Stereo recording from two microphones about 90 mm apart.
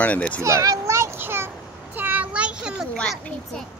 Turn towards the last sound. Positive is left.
turn(degrees=10)  # may be behind; listen again after turning